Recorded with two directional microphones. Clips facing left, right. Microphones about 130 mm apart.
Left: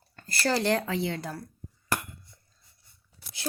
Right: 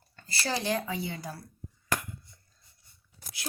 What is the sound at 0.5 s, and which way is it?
Speech, 70° left (ahead or behind).